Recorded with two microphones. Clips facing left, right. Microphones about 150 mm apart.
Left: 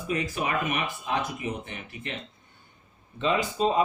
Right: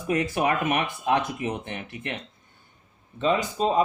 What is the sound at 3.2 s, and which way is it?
Speech, 40° right (ahead or behind).